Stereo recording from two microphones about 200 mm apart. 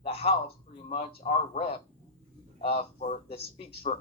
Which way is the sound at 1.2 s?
30° left (ahead or behind).